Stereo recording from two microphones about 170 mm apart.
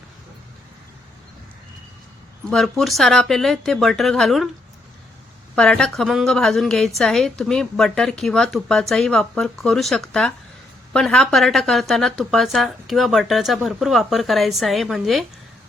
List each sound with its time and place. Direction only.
2.5 s a woman's voice: centre (ahead or behind)
5.5 s a woman's voice: 5° left (ahead or behind)